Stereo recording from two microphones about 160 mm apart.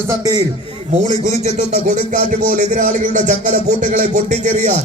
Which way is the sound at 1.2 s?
50° right (ahead or behind).